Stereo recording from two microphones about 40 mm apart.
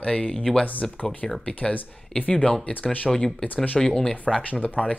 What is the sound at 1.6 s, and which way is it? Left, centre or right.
Speech, left.